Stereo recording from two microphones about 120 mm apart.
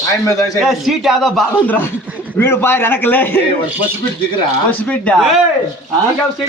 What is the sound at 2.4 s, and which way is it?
Speech, 20° left (ahead or behind).